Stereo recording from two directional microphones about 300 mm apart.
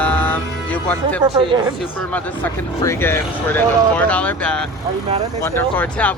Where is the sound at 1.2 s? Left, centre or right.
Centre.